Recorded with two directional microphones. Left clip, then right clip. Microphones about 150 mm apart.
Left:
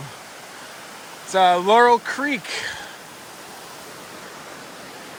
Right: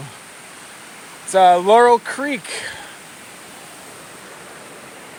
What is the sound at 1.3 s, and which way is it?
Speech, 20° left (ahead or behind).